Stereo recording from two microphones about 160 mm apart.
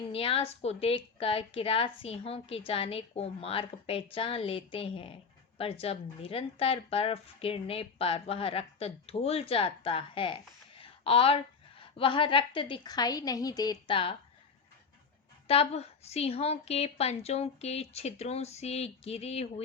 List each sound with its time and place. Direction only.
0.1 s a woman's voice: 35° left (ahead or behind)
10.8 s a sound: 35° left (ahead or behind)
11.9 s a woman's voice: 30° left (ahead or behind)
15.4 s a woman's voice: 40° left (ahead or behind)